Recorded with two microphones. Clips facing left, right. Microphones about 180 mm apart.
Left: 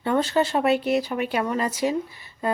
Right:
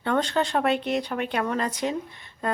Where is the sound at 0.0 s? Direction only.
5° left (ahead or behind).